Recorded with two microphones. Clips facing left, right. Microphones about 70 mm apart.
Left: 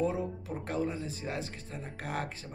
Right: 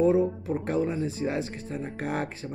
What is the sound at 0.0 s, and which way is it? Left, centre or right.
Speech, right.